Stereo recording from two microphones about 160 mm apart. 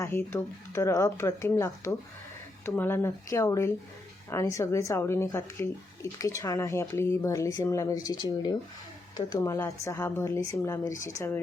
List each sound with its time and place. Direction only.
0.0 s speech: 15° left (ahead or behind)